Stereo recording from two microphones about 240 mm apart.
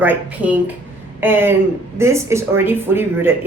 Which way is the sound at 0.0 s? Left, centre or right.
Centre.